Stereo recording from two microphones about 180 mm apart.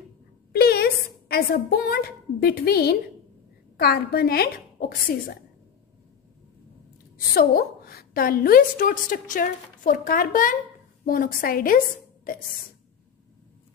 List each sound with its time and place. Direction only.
0.5 s a woman's voice: 60° left (ahead or behind)
7.3 s a woman's voice: 60° left (ahead or behind)